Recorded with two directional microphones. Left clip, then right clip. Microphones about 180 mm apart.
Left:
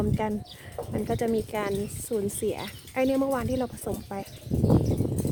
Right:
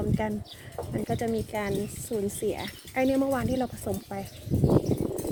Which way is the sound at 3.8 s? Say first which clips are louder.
Even; 20° left (ahead or behind).